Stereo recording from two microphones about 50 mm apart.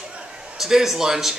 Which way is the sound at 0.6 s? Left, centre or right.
Centre.